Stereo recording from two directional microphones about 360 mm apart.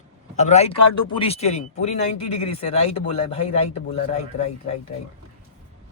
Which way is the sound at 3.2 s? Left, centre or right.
Centre.